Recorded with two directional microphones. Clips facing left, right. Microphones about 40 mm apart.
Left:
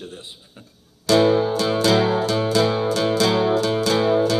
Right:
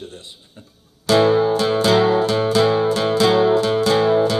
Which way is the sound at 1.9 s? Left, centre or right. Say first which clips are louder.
Right 3 dB; centre.